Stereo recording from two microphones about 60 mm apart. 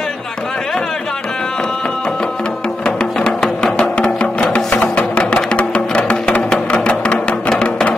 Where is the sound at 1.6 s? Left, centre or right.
Centre.